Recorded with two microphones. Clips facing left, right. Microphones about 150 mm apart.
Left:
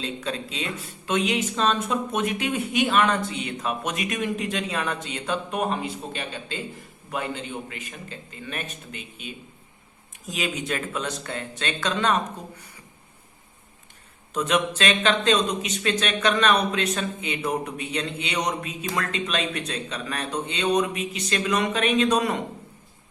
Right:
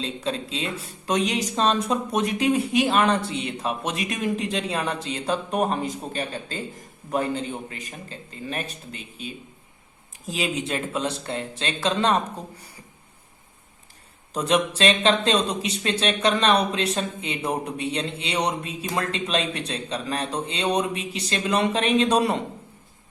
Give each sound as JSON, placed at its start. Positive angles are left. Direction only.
{"t": 0.0, "sound": "speech", "side_deg": -30}
{"t": 14.3, "sound": "speech", "side_deg": -35}